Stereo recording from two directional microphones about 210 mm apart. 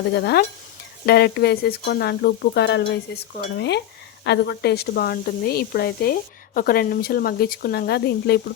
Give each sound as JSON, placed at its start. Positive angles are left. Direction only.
{"t": 0.1, "sound": "speech", "side_deg": 50}